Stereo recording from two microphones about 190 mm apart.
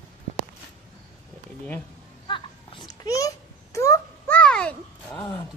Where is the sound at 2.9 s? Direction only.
15° left (ahead or behind).